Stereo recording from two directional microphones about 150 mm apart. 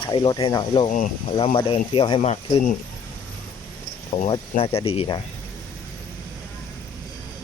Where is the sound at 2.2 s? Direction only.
45° left (ahead or behind).